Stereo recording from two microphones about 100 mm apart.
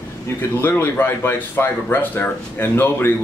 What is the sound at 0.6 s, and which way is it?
Speech, 25° left (ahead or behind).